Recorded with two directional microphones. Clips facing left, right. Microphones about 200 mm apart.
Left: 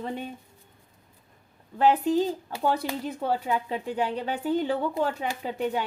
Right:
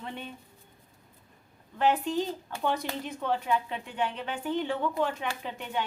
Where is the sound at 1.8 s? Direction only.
35° left (ahead or behind).